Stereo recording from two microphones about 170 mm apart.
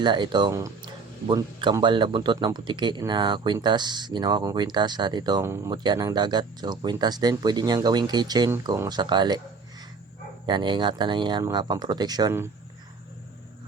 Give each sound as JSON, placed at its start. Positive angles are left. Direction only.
{"t": 0.0, "sound": "speech", "side_deg": -25}
{"t": 10.4, "sound": "speech", "side_deg": -25}